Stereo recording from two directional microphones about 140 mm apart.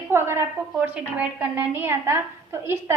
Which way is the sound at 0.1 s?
20° right (ahead or behind).